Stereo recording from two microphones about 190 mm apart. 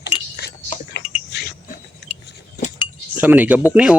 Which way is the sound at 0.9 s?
60° left (ahead or behind).